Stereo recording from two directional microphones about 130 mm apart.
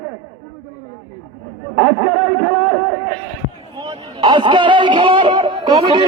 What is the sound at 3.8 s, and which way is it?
Speech, 35° right (ahead or behind).